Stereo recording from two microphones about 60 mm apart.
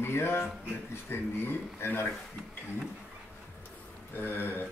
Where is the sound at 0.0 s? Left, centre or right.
Left.